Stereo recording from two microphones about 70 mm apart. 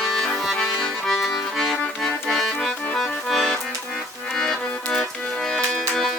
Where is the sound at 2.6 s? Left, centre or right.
Centre.